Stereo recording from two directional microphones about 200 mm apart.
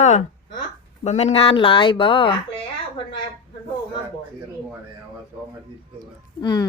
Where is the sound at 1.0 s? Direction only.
35° left (ahead or behind).